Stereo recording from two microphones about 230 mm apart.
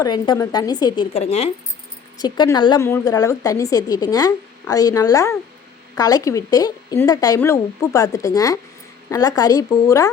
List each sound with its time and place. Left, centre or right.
0.0 s speech: centre
1.1 s speech: left